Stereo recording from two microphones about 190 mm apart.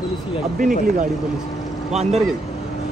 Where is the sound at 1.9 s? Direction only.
35° right (ahead or behind).